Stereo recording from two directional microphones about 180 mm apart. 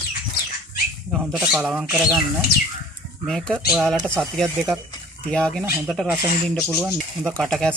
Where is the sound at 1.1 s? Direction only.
Centre (ahead or behind).